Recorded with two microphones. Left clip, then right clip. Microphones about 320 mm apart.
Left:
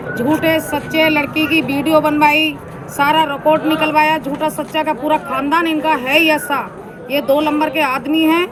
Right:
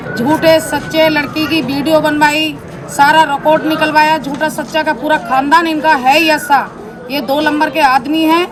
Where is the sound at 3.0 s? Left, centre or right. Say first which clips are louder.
Right 4 dB; centre.